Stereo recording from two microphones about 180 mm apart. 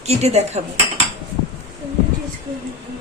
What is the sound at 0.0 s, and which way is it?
Speech, 35° right (ahead or behind).